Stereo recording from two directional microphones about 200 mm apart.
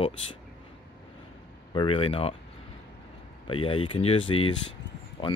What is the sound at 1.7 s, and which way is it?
Speech, 25° left (ahead or behind).